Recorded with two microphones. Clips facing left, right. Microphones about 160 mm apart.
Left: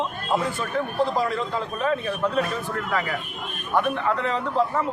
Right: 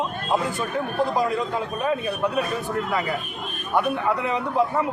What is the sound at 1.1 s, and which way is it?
A man's voice, 10° right (ahead or behind).